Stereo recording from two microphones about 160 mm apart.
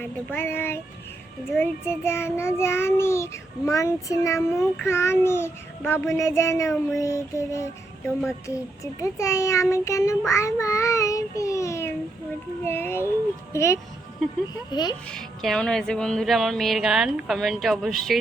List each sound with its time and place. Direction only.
0.0 s a child's voice: 10° left (ahead or behind)
15.1 s music: centre (ahead or behind)